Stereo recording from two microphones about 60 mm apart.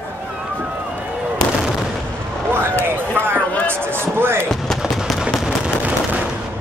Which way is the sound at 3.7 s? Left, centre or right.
Right.